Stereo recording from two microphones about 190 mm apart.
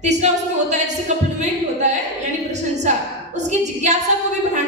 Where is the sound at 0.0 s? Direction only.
35° right (ahead or behind).